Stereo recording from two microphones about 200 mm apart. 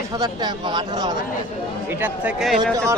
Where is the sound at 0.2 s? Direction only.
20° right (ahead or behind).